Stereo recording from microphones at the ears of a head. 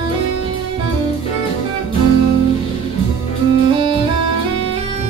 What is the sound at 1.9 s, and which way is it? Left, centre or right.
Music, right.